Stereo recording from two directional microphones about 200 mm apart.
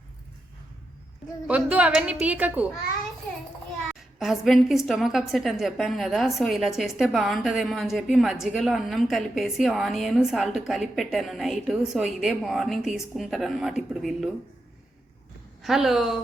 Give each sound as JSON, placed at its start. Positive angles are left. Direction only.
{"t": 1.5, "sound": "a woman's voice", "side_deg": -5}
{"t": 4.2, "sound": "a woman's voice", "side_deg": 0}
{"t": 15.6, "sound": "a woman's voice", "side_deg": 0}